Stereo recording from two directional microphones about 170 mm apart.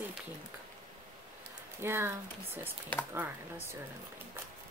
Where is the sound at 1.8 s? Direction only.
15° right (ahead or behind).